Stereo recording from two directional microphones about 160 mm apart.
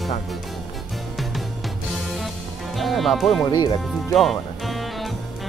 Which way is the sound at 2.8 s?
Centre (ahead or behind).